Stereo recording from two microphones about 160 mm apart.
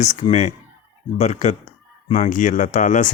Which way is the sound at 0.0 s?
45° left (ahead or behind).